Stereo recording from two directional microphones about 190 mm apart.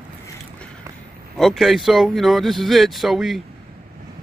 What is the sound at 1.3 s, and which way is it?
Speech, centre (ahead or behind).